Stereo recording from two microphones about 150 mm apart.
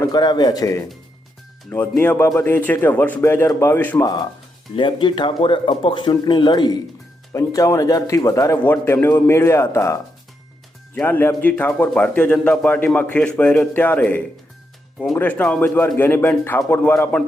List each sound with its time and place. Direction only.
0.0 s a man's voice: 25° left (ahead or behind)
2.0 s a man's voice: 15° left (ahead or behind)
4.7 s a man's voice: 35° left (ahead or behind); by 17.2 s 10° left (ahead or behind)